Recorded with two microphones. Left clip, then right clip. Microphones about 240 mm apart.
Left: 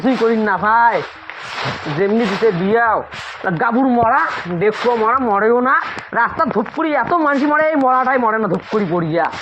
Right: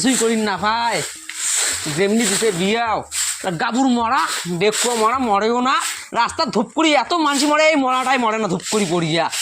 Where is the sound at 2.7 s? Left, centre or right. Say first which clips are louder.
Left 5 dB; right.